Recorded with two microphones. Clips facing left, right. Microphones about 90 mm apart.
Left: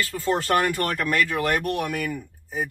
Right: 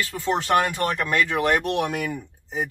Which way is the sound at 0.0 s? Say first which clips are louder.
Even; 25° right (ahead or behind).